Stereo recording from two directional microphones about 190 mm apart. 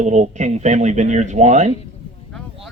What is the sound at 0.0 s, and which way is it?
Speech, 40° right (ahead or behind).